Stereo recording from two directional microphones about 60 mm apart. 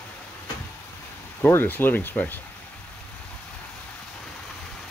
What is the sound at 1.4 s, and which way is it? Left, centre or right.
Speech, left.